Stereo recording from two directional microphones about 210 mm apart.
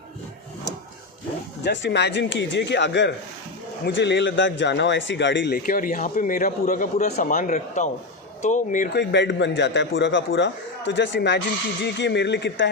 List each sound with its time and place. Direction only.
1.6 s a man's voice: 55° left (ahead or behind)
5.6 s speech: 40° left (ahead or behind)
8.9 s a man's voice: 55° left (ahead or behind)